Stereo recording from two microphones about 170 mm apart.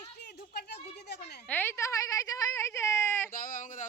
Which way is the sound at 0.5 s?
75° left (ahead or behind).